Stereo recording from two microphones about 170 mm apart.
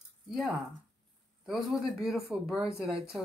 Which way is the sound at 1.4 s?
Centre (ahead or behind).